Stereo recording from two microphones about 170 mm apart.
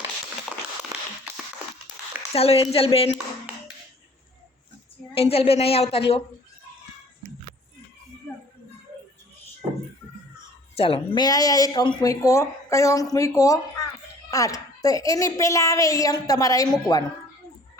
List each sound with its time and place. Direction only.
0.9 s a sound: 20° right (ahead or behind)
2.3 s a woman's voice: 35° left (ahead or behind)
5.1 s a woman's voice: 35° left (ahead or behind)
10.8 s speech: 35° left (ahead or behind)
16.6 s a woman's voice: 5° left (ahead or behind)